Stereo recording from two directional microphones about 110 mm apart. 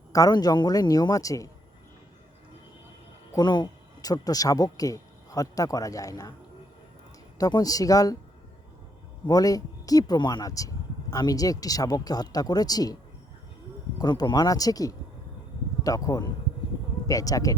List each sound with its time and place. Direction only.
0.1 s speech: 30° left (ahead or behind)
3.3 s speech: 40° left (ahead or behind)
7.3 s speech: 35° left (ahead or behind)
9.2 s speech: 35° left (ahead or behind)
14.0 s speech: 40° left (ahead or behind)